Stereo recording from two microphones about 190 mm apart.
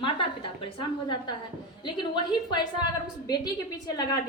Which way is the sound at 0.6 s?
25° left (ahead or behind).